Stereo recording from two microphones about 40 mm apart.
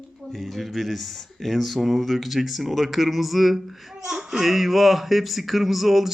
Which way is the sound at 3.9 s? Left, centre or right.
Centre.